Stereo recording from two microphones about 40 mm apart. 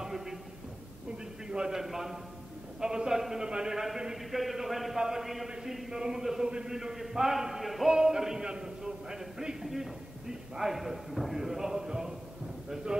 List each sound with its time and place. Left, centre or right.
0.0 s a sound: centre
1.5 s a man's voice: centre
7.9 s a man's voice: centre